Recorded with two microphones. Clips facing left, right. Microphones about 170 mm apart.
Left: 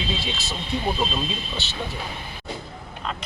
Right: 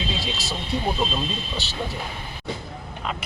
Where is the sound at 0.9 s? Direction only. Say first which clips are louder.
Even; 5° left (ahead or behind).